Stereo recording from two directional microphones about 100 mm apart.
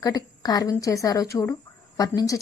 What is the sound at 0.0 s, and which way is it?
A woman's voice, 40° left (ahead or behind).